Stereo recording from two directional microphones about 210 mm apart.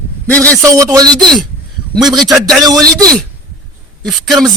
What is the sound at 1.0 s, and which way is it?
Speech, 20° right (ahead or behind).